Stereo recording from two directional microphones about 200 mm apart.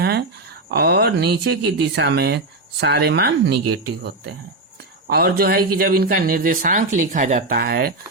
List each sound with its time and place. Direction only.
0.0 s a sound: 55° right (ahead or behind)
0.7 s a man's voice: 50° right (ahead or behind)
7.5 s a man's voice: 50° right (ahead or behind)